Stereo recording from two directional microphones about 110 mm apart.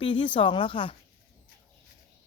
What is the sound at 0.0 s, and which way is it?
Speech, 50° left (ahead or behind).